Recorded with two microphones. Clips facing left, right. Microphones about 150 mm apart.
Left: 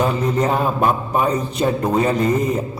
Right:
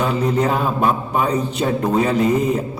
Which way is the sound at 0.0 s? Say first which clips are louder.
Even; 5° right (ahead or behind).